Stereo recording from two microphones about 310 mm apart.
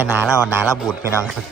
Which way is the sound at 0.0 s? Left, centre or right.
Centre.